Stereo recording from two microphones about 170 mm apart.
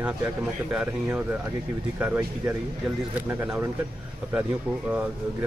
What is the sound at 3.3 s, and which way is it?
Speech, 10° right (ahead or behind).